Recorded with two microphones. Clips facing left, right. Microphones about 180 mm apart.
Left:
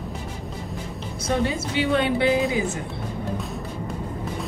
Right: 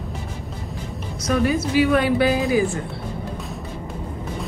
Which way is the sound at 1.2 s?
25° left (ahead or behind).